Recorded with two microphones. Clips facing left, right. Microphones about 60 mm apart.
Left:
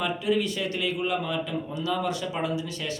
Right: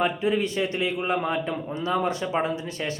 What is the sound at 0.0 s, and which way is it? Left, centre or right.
A man's voice, right.